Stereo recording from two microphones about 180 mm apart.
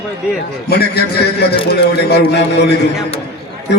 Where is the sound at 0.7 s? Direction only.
65° left (ahead or behind).